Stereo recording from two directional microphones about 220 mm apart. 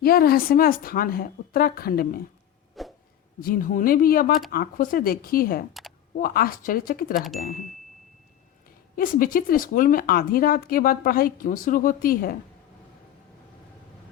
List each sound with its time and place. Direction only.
0.0 s a woman's voice: 45° left (ahead or behind)
2.8 s a sound: centre (ahead or behind)
3.4 s a woman's voice: 40° left (ahead or behind)
9.0 s a woman's voice: 40° left (ahead or behind)